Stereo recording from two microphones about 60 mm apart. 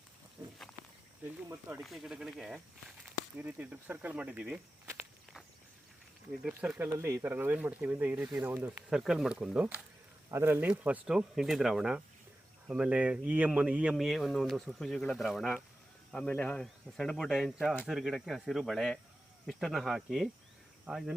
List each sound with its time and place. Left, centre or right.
1.8 s speech: centre
3.3 s speech: right
4.9 s walk: centre
6.7 s speech: right
8.9 s speech: centre
10.3 s speech: right
10.7 s speech: right
11.1 s speech: centre
13.9 s speech: centre
16.1 s speech: left
16.6 s speech: centre